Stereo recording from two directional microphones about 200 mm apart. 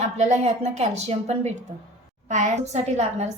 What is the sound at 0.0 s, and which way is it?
A woman's voice, 35° right (ahead or behind).